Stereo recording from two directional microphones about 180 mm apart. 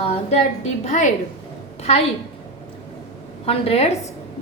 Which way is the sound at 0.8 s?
40° left (ahead or behind).